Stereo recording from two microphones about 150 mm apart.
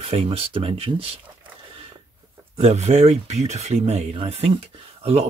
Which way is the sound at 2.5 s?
50° right (ahead or behind).